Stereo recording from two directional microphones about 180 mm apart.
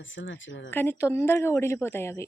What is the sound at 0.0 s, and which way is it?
Speech, 90° left.